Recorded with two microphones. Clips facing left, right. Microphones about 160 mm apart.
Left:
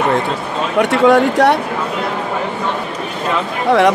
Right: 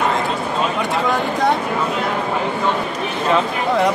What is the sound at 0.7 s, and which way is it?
Speech, 75° left (ahead or behind).